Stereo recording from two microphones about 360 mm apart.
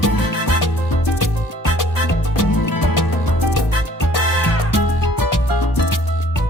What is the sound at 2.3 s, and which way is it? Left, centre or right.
Music, left.